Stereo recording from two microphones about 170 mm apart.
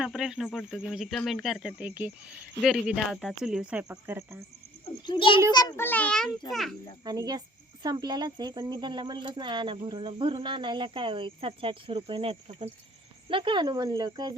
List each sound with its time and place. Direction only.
0.0 s speech: 5° right (ahead or behind)
5.0 s a child's voice: 30° left (ahead or behind)
5.7 s a child's voice: 10° left (ahead or behind)
7.0 s speech: 25° right (ahead or behind)